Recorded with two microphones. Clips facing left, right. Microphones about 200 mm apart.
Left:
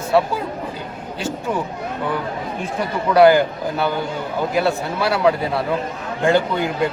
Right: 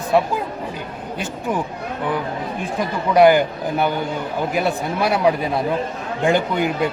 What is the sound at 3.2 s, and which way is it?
Speech, 20° right (ahead or behind).